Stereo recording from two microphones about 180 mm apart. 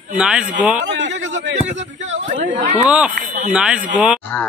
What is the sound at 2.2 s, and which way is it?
Speech, 45° right (ahead or behind).